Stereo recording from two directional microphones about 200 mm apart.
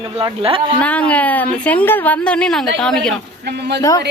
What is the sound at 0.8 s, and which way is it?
A woman's voice, 5° left (ahead or behind).